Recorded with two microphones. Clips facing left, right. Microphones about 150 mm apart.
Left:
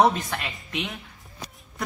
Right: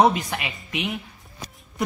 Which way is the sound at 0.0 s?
10° right (ahead or behind).